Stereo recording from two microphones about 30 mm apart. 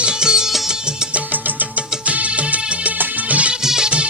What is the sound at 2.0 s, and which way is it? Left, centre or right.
Music of bollywood, right.